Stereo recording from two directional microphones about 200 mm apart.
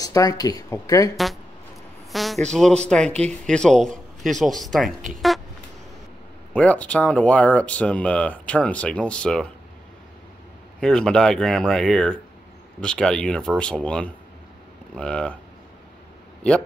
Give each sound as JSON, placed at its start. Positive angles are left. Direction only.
{"t": 0.0, "sound": "speech", "side_deg": 15}
{"t": 1.1, "sound": "speech", "side_deg": 0}
{"t": 2.1, "sound": "a sound", "side_deg": 0}
{"t": 2.5, "sound": "speech", "side_deg": 5}
{"t": 3.1, "sound": "speech", "side_deg": -35}
{"t": 3.4, "sound": "speech", "side_deg": 5}
{"t": 6.5, "sound": "speech", "side_deg": 5}
{"t": 10.8, "sound": "speech", "side_deg": 5}